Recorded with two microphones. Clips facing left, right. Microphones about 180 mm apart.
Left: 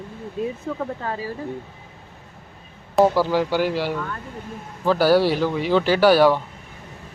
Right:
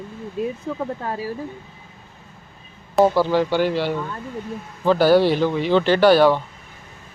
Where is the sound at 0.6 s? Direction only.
5° right (ahead or behind).